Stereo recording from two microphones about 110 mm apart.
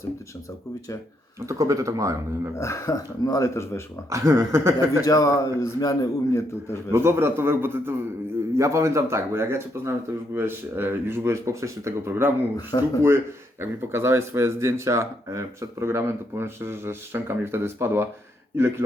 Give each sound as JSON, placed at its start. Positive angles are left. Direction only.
{"t": 1.4, "sound": "speech", "side_deg": -30}
{"t": 2.6, "sound": "a man's voice", "side_deg": 25}
{"t": 4.1, "sound": "speech", "side_deg": -25}
{"t": 5.0, "sound": "a man's voice", "side_deg": 30}
{"t": 6.9, "sound": "speech", "side_deg": -25}